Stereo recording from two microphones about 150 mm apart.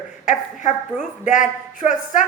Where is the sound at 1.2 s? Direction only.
60° left (ahead or behind).